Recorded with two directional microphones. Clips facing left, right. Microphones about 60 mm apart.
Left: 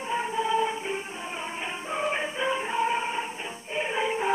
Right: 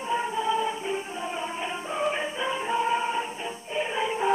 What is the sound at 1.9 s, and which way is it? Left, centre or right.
Music, left.